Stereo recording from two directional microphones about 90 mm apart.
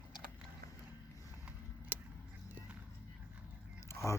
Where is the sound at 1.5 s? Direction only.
20° right (ahead or behind).